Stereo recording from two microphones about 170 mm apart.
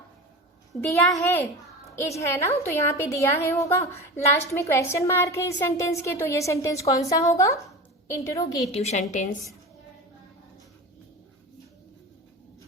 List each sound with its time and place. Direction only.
0.8 s a woman's voice: 15° left (ahead or behind)
8.7 s a woman's voice: 40° left (ahead or behind)